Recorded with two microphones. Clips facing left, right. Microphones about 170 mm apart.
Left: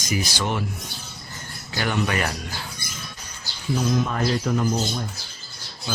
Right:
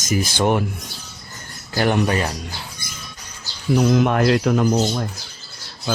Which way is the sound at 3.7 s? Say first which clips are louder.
Right 7 dB; 70° right (ahead or behind).